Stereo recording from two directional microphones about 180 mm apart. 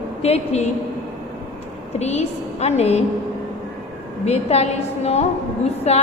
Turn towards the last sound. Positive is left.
turn(degrees=35)  # may be behind; listen again after turning